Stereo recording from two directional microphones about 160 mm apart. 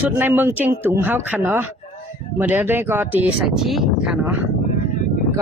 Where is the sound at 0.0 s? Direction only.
10° right (ahead or behind).